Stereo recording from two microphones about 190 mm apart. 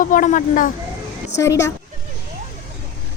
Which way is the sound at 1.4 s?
15° left (ahead or behind).